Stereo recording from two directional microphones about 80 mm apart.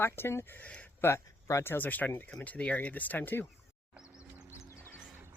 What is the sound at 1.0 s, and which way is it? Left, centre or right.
Speech, left.